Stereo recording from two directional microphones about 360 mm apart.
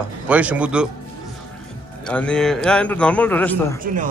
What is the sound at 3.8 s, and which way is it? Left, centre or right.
Speech, right.